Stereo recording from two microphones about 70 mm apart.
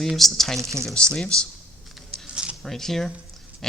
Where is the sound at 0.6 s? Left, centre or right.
Right.